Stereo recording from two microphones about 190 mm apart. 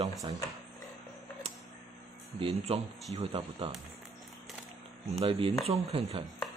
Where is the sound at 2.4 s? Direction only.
30° right (ahead or behind).